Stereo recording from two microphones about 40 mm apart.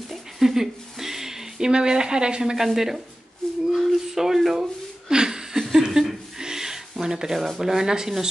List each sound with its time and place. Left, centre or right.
0.4 s speech: centre
2.5 s speech: centre
3.7 s a sound: centre
5.1 s chuckle: centre
7.3 s speech: centre